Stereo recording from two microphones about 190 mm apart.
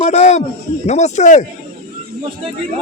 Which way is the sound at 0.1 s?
35° left (ahead or behind).